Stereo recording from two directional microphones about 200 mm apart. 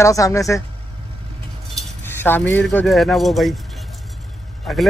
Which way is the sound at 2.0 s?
10° left (ahead or behind).